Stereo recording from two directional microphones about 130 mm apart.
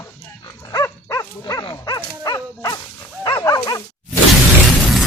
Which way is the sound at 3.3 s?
30° left (ahead or behind).